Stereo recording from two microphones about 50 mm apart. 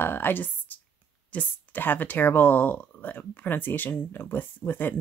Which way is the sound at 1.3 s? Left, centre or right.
Left.